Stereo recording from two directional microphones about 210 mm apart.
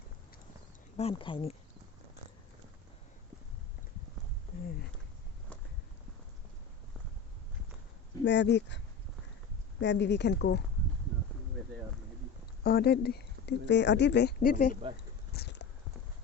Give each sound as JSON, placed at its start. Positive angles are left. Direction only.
{"t": 0.9, "sound": "speech", "side_deg": 25}
{"t": 8.2, "sound": "a woman's voice", "side_deg": 55}
{"t": 9.8, "sound": "a woman's voice", "side_deg": 60}
{"t": 12.6, "sound": "speech", "side_deg": 50}
{"t": 15.3, "sound": "a sound", "side_deg": 50}